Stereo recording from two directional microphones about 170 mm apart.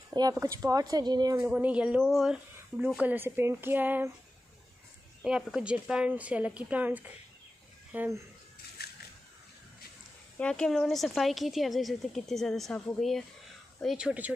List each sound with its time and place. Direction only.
0.1 s speech: 20° right (ahead or behind)
1.4 s a woman's voice: 10° right (ahead or behind)
5.2 s speech: 5° right (ahead or behind)
10.3 s a woman's voice: 5° left (ahead or behind)